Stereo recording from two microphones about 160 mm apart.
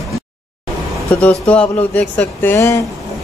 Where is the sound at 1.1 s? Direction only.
10° left (ahead or behind).